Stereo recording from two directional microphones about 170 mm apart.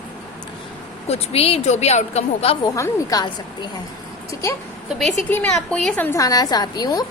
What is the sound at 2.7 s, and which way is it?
Speech, 20° left (ahead or behind).